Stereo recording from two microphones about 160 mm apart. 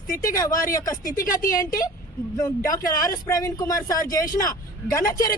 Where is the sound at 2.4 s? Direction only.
20° left (ahead or behind).